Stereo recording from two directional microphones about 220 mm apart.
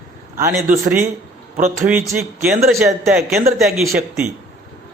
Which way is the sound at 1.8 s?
5° right (ahead or behind).